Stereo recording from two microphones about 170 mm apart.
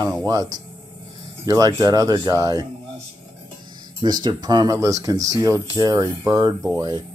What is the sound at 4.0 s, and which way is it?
Speech, 25° right (ahead or behind).